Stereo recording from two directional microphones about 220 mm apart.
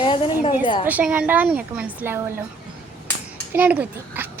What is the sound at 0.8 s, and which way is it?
Speech, 5° right (ahead or behind).